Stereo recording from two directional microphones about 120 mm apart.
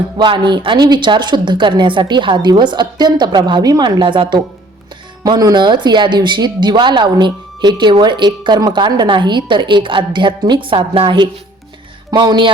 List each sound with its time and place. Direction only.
0.2 s speech: 40° right (ahead or behind)